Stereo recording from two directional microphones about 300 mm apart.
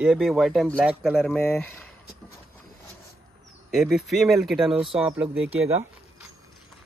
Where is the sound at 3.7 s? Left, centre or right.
Centre.